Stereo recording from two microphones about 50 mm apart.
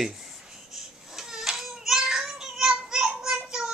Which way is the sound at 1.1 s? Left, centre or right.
Centre.